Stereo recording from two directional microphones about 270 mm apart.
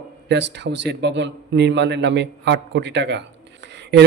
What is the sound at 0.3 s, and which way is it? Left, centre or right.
A man's voice, right.